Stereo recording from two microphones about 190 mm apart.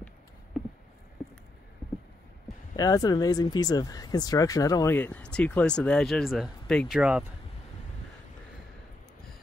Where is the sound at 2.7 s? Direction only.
20° left (ahead or behind); by 7.2 s 5° right (ahead or behind).